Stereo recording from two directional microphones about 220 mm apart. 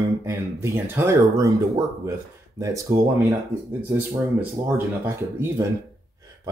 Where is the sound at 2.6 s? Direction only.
15° right (ahead or behind).